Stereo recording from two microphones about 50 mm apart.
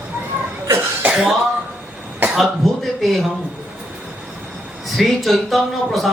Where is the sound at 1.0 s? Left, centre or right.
Right.